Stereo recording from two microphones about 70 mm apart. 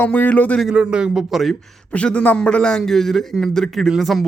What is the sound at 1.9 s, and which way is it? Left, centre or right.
A man's voice, centre.